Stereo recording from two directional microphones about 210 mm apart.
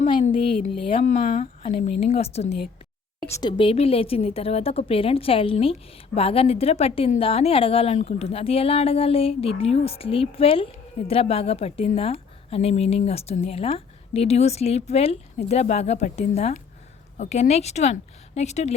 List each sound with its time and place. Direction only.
0.1 s a woman's voice: 25° left (ahead or behind)
1.1 s a woman's voice: 40° left (ahead or behind)
3.2 s speech: 15° left (ahead or behind)
3.6 s a woman's voice: 25° left (ahead or behind)